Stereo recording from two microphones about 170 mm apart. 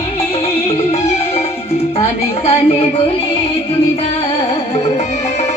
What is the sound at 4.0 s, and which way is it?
Music, 35° left (ahead or behind).